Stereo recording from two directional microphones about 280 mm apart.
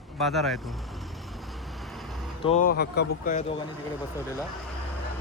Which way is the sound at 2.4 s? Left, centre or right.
Left.